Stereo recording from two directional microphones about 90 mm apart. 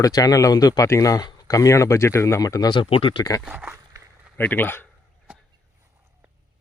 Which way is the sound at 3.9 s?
40° right (ahead or behind).